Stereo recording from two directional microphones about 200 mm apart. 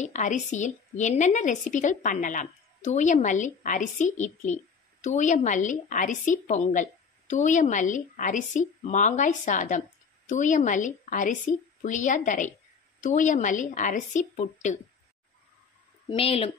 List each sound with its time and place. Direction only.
0.0 s a woman's voice: 35° left (ahead or behind)
16.1 s a woman's voice: 30° left (ahead or behind)